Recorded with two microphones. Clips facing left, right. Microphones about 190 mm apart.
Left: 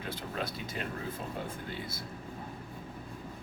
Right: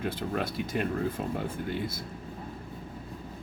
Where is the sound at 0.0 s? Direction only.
55° right (ahead or behind).